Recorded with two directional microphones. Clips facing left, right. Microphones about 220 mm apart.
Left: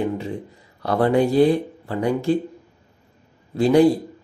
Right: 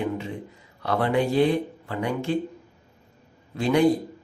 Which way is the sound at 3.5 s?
35° left (ahead or behind).